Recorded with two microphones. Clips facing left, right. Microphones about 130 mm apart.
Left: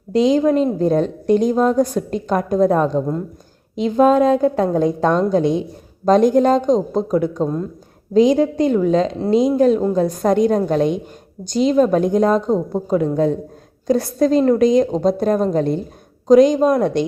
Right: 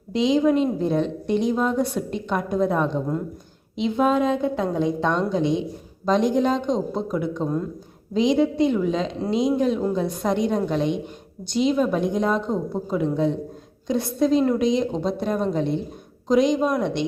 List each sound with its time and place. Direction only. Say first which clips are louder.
0.1 s a woman's voice: left 4 dB; 45° left (ahead or behind)
11.4 s a woman's voice: left 4 dB; centre (ahead or behind)
11.7 s a woman's voice: left 9 dB; 45° left (ahead or behind)